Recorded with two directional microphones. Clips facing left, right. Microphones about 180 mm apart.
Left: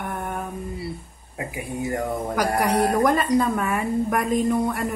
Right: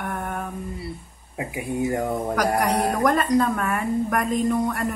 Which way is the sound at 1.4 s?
20° right (ahead or behind).